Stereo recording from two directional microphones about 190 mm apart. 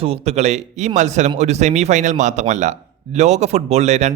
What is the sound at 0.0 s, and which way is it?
A man's voice, 30° right (ahead or behind).